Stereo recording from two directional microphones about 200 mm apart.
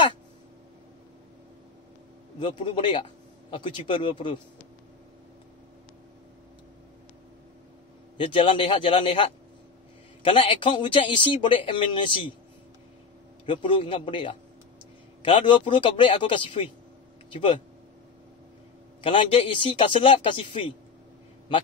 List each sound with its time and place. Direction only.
2.4 s speech: 25° left (ahead or behind)
8.2 s speech: 25° left (ahead or behind)
13.5 s speech: 25° left (ahead or behind)
18.9 s speech: 25° left (ahead or behind)